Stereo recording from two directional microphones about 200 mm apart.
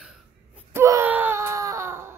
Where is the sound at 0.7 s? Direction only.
15° right (ahead or behind).